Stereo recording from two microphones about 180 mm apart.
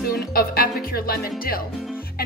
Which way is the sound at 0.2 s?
55° left (ahead or behind).